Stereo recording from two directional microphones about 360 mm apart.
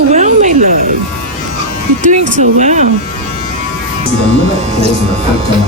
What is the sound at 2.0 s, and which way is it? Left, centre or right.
Speech, right.